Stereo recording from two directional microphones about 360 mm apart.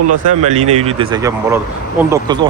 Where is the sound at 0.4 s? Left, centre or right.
Centre.